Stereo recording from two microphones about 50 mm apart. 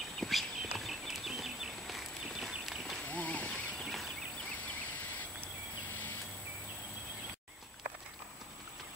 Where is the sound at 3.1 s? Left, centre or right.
Left.